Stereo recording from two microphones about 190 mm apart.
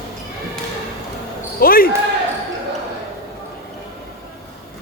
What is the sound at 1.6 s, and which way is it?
Speech, 50° left (ahead or behind).